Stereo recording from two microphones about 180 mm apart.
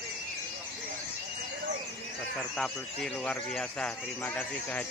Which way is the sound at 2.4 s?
Centre (ahead or behind).